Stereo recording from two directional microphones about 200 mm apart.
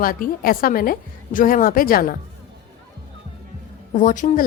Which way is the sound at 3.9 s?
40° left (ahead or behind).